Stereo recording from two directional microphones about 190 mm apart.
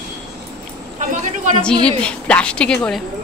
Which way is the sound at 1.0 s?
40° right (ahead or behind).